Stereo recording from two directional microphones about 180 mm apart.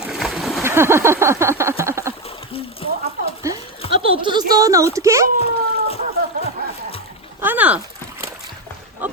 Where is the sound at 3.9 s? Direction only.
30° right (ahead or behind).